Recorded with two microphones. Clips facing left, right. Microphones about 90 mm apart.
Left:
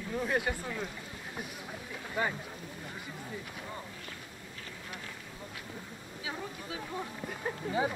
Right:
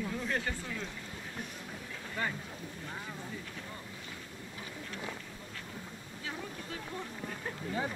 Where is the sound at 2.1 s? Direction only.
15° left (ahead or behind).